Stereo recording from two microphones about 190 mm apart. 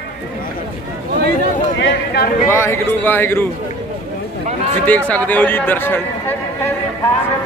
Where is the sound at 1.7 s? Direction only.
65° left (ahead or behind).